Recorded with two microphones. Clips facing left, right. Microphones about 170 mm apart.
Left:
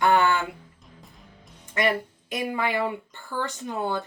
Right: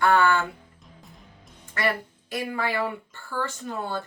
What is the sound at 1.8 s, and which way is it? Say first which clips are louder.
Speech: left 3 dB; 20° left (ahead or behind).